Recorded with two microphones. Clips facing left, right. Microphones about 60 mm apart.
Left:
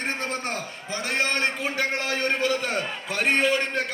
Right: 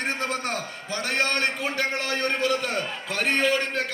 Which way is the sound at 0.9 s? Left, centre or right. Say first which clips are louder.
Even; left.